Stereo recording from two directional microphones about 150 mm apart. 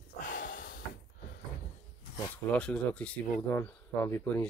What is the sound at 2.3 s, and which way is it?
Speech, 10° left (ahead or behind).